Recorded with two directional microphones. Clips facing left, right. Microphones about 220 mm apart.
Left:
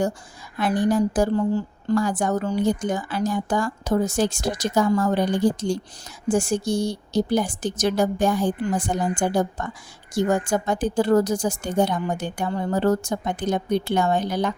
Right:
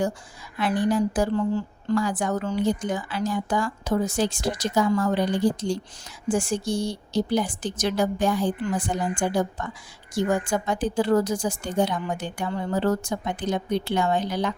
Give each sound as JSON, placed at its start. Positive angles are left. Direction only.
{"t": 0.6, "sound": "a woman's voice", "side_deg": 45}